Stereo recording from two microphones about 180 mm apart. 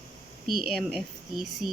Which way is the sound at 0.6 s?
Centre (ahead or behind).